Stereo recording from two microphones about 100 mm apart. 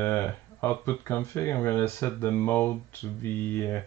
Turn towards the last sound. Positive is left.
turn(degrees=25)  # may be behind; listen again after turning